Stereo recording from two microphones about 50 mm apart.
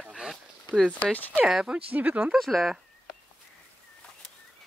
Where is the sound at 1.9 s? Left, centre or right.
Right.